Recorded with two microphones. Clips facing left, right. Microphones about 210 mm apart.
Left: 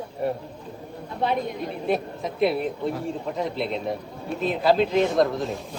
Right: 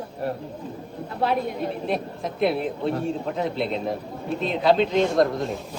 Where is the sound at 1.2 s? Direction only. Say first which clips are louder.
Right 1 dB; centre (ahead or behind).